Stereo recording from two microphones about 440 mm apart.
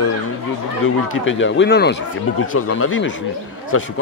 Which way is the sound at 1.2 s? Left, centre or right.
Left.